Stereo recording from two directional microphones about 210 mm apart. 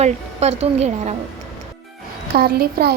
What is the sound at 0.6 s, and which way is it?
Speech, 30° right (ahead or behind).